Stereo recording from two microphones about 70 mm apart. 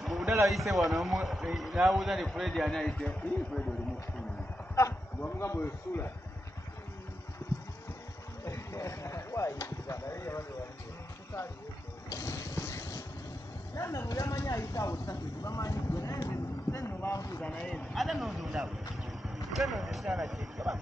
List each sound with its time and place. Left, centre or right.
0.0 s a sound: centre
0.5 s a man's voice: centre
2.9 s speech: centre
5.2 s a man's voice: left
8.5 s speech: left
12.1 s a sound: left
13.7 s speech: left
17.4 s speech: centre
17.9 s a man's voice: centre